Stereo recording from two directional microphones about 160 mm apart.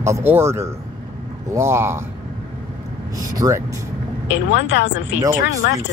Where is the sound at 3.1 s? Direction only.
20° right (ahead or behind).